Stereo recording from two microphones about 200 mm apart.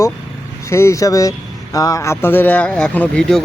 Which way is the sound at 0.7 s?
15° left (ahead or behind).